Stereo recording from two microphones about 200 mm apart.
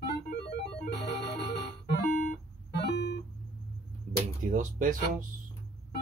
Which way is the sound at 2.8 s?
55° left (ahead or behind).